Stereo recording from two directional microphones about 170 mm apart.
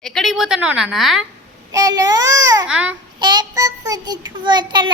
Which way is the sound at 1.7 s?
20° right (ahead or behind).